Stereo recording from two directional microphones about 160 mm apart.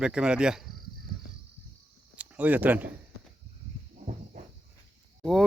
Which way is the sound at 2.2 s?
10° right (ahead or behind).